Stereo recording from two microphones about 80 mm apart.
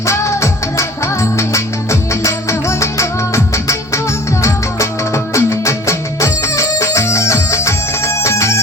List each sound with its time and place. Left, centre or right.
0.0 s music: left